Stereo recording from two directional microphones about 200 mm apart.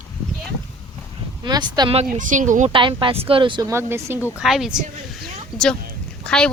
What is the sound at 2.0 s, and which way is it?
Speech, 40° right (ahead or behind).